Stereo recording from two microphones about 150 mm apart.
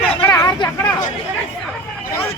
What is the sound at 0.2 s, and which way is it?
Vehicle, 15° left (ahead or behind).